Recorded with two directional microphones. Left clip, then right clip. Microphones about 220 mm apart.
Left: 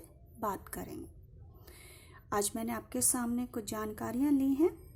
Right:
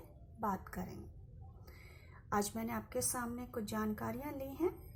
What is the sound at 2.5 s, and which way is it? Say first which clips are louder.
A woman's voice: left 3 dB; 45° left (ahead or behind).